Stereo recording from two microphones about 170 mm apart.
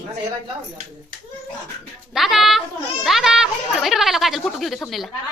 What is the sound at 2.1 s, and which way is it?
Speech, centre (ahead or behind).